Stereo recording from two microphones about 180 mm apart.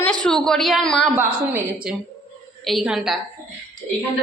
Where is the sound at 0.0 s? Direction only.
5° left (ahead or behind).